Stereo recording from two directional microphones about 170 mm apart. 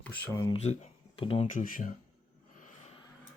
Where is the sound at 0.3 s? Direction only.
25° left (ahead or behind).